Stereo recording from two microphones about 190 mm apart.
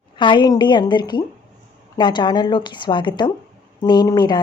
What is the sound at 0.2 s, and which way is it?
Speech, 25° left (ahead or behind).